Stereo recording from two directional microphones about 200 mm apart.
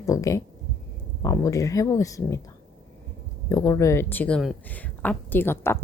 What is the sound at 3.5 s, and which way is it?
A woman's voice, 15° left (ahead or behind).